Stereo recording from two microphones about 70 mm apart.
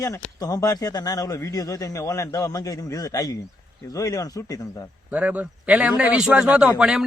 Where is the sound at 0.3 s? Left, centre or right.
Left.